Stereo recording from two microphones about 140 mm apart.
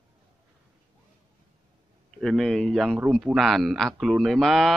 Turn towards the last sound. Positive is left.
turn(degrees=0)  # may be behind; listen again after turning